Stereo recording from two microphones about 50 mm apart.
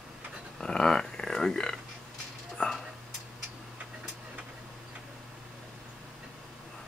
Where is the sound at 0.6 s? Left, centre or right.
Centre.